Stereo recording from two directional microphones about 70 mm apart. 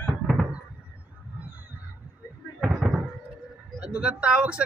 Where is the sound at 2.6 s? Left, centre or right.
Centre.